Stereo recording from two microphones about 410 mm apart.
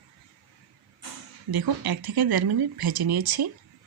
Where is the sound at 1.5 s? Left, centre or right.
Right.